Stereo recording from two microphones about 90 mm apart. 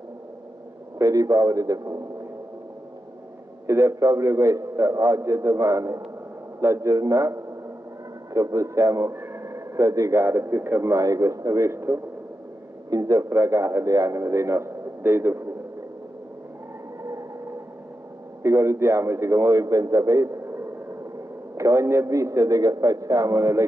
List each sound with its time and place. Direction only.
0.9 s a man's voice: 40° right (ahead or behind)
3.6 s a man's voice: 30° right (ahead or behind)
9.1 s a man's voice: 25° right (ahead or behind)
18.4 s a man's voice: 35° right (ahead or behind)